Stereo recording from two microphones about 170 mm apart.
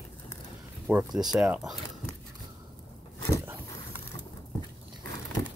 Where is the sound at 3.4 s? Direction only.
10° right (ahead or behind).